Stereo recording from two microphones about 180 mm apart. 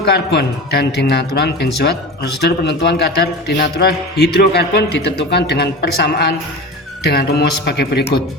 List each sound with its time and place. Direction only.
0.0 s speech: 65° left (ahead or behind)